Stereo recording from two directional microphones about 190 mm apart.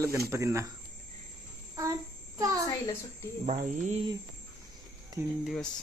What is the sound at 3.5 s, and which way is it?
Speech, 40° right (ahead or behind).